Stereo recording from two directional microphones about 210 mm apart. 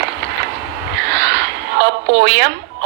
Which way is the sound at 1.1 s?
55° right (ahead or behind).